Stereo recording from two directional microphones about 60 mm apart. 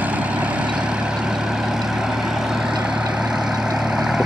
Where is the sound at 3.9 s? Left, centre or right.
Centre.